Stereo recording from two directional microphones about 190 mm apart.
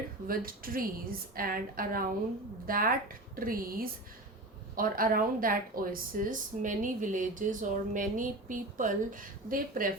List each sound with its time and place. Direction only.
0.3 s speech: 50° right (ahead or behind)